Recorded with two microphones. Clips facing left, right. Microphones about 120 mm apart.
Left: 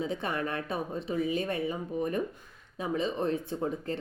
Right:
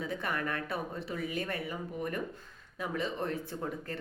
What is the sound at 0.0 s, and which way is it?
A woman's voice, 20° left (ahead or behind).